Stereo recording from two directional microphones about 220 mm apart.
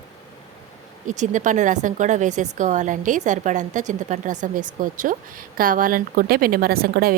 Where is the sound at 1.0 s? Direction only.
35° right (ahead or behind).